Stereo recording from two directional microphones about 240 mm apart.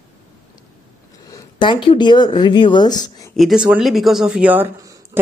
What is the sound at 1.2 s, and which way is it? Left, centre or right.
Speech, centre.